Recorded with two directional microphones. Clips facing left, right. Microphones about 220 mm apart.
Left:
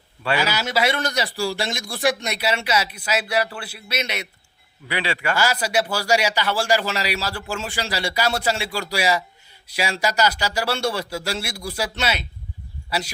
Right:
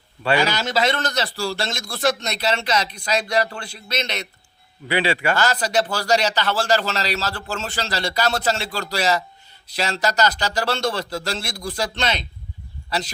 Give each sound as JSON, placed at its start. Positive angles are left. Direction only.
{"t": 0.3, "sound": "a man's voice", "side_deg": 10}
{"t": 4.9, "sound": "a man's voice", "side_deg": -30}
{"t": 5.3, "sound": "a man's voice", "side_deg": 10}